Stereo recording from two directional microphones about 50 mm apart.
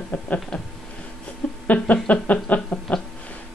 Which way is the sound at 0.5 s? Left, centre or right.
Centre.